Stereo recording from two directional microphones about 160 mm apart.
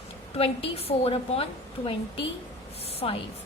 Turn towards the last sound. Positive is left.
turn(degrees=35)  # may be behind; listen again after turning